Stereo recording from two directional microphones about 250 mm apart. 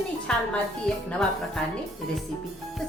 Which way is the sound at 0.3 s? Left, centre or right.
Centre.